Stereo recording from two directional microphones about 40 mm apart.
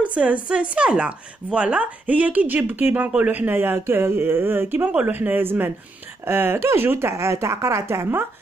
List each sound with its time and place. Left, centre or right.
0.0 s speech: right
2.0 s a woman's voice: right
4.8 s speech: right
5.1 s a man's voice: right
6.2 s speech: right